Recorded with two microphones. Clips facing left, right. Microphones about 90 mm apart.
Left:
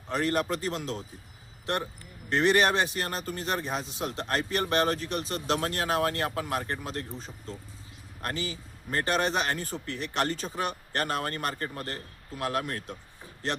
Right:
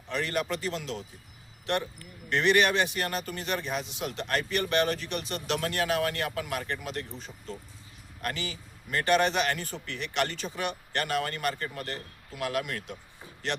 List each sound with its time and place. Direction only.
0.1 s speech: 40° left (ahead or behind)